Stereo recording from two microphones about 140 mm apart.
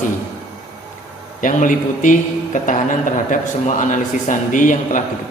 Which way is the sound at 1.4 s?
70° left (ahead or behind).